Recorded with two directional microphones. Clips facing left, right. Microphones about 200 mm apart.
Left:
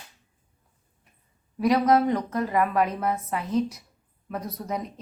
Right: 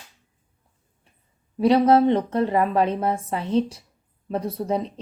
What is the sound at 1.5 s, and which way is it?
Speech, 30° right (ahead or behind).